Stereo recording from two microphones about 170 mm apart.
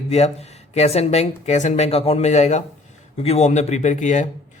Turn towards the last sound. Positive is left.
turn(degrees=45)  # may be behind; listen again after turning